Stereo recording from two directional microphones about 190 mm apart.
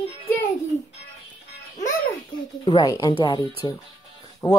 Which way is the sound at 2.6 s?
20° left (ahead or behind).